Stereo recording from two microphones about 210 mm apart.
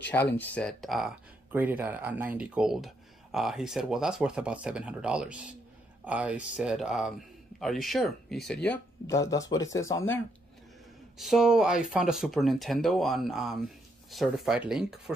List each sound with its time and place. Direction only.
0.1 s speech: 10° left (ahead or behind)
9.0 s speech: 15° left (ahead or behind)
11.1 s speech: centre (ahead or behind)